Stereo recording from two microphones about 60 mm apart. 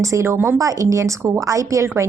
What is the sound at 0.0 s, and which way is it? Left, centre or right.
Speech, right.